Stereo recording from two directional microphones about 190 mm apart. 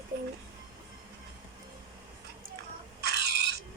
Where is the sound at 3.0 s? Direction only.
60° right (ahead or behind).